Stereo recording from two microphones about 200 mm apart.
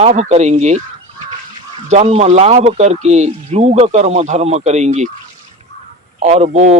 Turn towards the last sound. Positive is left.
turn(degrees=-35)  # may be behind; listen again after turning